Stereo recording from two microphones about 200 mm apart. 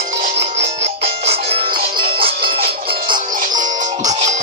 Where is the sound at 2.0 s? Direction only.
50° right (ahead or behind).